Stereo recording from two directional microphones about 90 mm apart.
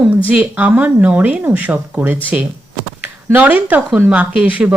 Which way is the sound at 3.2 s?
20° right (ahead or behind).